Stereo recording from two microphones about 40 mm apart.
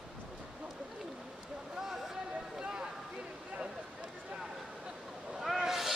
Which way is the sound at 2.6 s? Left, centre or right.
Centre.